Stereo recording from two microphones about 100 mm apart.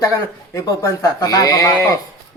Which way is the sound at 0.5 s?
35° left (ahead or behind).